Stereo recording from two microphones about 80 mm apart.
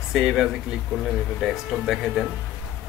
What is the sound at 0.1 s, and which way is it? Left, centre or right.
Speech, centre.